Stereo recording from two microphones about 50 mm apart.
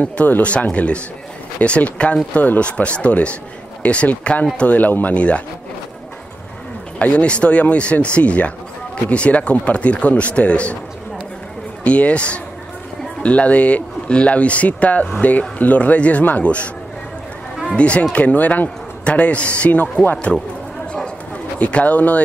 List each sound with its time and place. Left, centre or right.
0.0 s a man's voice: left
7.0 s a man's voice: left
11.8 s a man's voice: left
17.7 s a man's voice: left
21.5 s a man's voice: left